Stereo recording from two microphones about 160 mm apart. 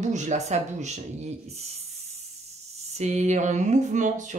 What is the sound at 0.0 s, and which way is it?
Speech, 50° right (ahead or behind).